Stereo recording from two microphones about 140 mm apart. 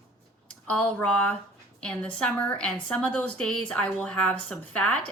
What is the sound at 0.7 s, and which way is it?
A woman's voice, 10° left (ahead or behind).